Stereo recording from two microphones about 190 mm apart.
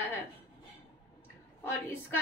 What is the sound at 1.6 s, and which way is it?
Speech, 10° left (ahead or behind).